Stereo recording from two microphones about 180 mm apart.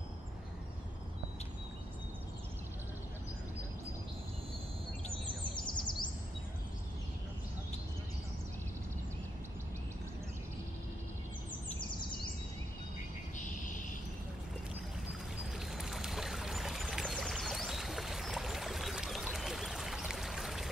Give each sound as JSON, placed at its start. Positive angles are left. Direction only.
{"t": 5.8, "sound": "bird vocalization", "side_deg": 25}
{"t": 15.6, "sound": "pour", "side_deg": 0}